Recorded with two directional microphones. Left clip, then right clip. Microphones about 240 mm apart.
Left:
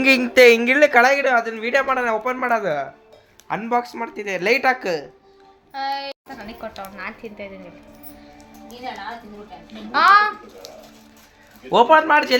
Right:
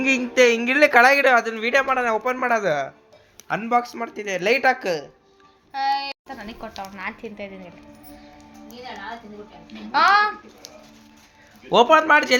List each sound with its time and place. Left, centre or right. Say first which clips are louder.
0.0 s speech: left 5 dB; centre
0.8 s speech: even; centre
1.2 s speech: right 1 dB; right
1.5 s a woman's voice: even; centre
5.7 s a sound: right 3 dB; centre
6.9 s speech: even; centre
9.7 s speech: left 3 dB; centre
11.7 s speech: left 1 dB; centre